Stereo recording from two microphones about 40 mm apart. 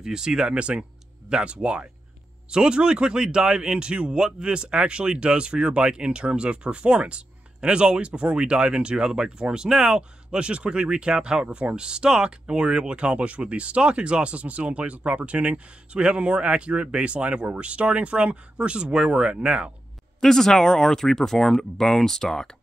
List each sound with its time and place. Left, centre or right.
0.0 s speech: centre
0.6 s speech: right
20.2 s speech: centre